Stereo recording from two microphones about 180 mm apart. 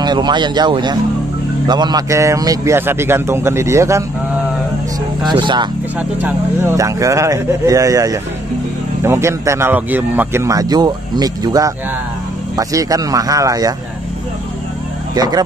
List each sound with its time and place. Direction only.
0.0 s speech: 25° right (ahead or behind)
5.2 s speech: 25° right (ahead or behind)
5.9 s speech: 10° right (ahead or behind)
15.1 s speech: 20° right (ahead or behind)